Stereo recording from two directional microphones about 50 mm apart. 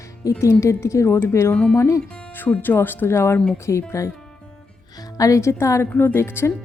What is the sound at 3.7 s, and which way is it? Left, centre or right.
Speech, left.